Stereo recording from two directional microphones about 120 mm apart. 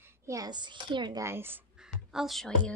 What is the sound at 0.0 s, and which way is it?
A child's voice, 25° right (ahead or behind).